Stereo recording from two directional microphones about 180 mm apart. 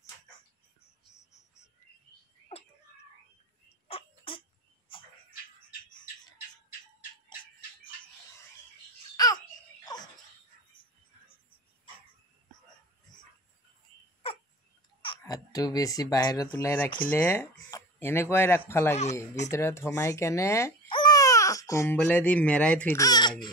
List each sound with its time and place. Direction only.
3.6 s a sound: 35° left (ahead or behind)
9.1 s babbling: 20° left (ahead or behind)
15.0 s speech: 25° left (ahead or behind)
17.6 s a sound: 15° left (ahead or behind)
18.7 s speech: 15° left (ahead or behind)
22.9 s speech: 20° left (ahead or behind)